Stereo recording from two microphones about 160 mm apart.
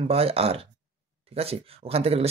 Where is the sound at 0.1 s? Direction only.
40° right (ahead or behind).